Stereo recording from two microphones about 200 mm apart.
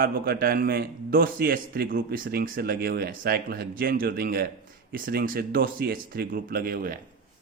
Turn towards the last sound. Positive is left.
turn(degrees=-45)  # may be behind; listen again after turning